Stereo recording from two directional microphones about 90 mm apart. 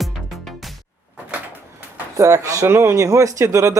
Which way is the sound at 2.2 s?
40° right (ahead or behind).